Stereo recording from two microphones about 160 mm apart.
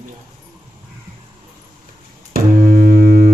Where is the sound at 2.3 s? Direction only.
60° right (ahead or behind).